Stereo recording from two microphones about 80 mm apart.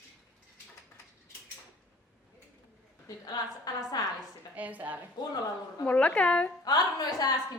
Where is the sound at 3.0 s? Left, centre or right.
Left.